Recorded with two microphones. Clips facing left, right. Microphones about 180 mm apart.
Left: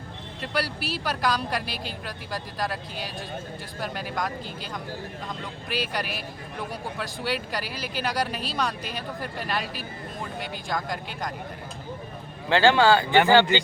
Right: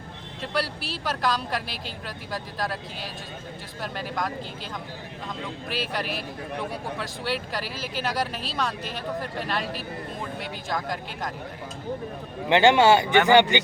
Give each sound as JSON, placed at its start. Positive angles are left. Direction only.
{"t": 0.5, "sound": "speech", "side_deg": 0}
{"t": 5.6, "sound": "speech", "side_deg": 0}
{"t": 12.5, "sound": "speech", "side_deg": -20}